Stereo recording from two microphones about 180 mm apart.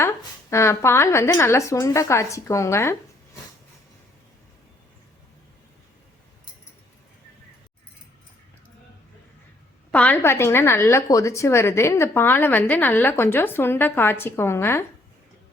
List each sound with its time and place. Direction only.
0.5 s a woman's voice: 15° left (ahead or behind)
9.9 s a woman's voice: 10° left (ahead or behind)